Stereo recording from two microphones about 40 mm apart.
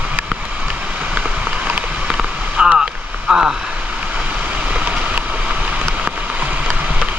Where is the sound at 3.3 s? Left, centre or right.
Centre.